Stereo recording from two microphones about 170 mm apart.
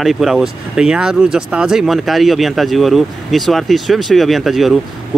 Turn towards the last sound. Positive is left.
turn(degrees=0)  # may be behind; listen again after turning